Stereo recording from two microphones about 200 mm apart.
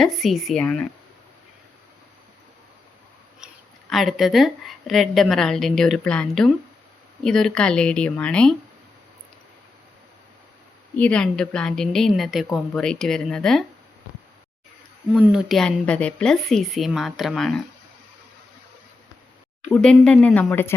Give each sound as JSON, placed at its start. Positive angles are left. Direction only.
{"t": 0.0, "sound": "speech", "side_deg": 0}
{"t": 3.4, "sound": "speech", "side_deg": 0}
{"t": 10.9, "sound": "speech", "side_deg": 5}
{"t": 15.1, "sound": "speech", "side_deg": -5}
{"t": 19.7, "sound": "speech", "side_deg": 5}